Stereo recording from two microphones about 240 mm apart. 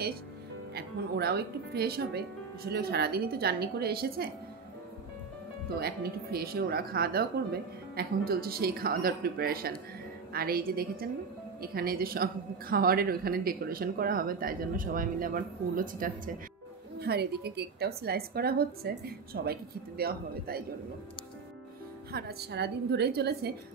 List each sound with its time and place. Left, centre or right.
0.7 s a woman's voice: right
5.8 s a woman's voice: right
22.1 s a woman's voice: right